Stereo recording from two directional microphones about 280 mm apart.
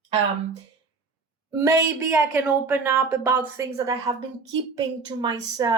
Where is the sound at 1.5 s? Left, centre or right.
Centre.